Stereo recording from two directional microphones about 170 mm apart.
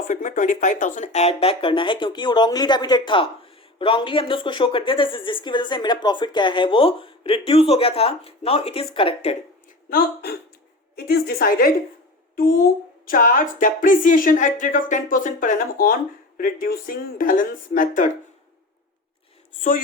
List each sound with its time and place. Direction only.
0.1 s a woman's voice: 50° left (ahead or behind)
9.9 s speech: 65° left (ahead or behind)